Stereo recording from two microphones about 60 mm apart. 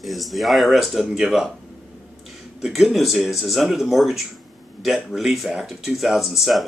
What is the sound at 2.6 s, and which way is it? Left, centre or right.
Speech, centre.